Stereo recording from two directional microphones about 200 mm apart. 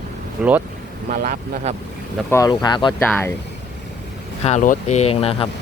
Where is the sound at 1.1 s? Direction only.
40° right (ahead or behind).